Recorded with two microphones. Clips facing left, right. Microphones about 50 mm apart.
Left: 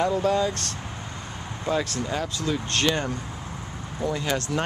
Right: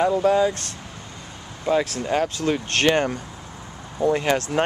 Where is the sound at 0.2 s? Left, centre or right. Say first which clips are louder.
Right 4 dB; centre.